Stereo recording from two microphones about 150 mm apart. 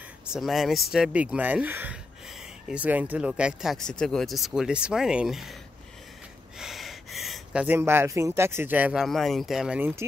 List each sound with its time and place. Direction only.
0.3 s speech: centre (ahead or behind)
6.6 s gasp: centre (ahead or behind)
7.6 s speech: 15° right (ahead or behind)
9.0 s speech: centre (ahead or behind)